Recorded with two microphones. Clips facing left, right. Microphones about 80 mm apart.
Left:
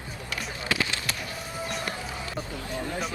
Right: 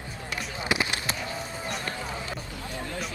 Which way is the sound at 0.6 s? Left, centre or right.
Right.